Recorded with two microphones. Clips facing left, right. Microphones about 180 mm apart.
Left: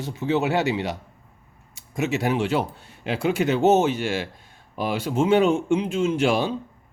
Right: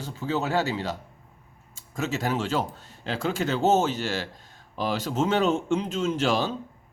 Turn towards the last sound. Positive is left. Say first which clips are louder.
# left 3 dB
turn(degrees=10)  # may be behind; listen again after turning